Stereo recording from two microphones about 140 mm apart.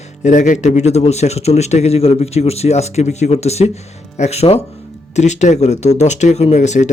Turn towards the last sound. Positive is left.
turn(degrees=60)  # may be behind; listen again after turning